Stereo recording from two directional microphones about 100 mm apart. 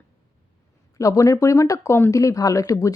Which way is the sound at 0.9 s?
35° left (ahead or behind).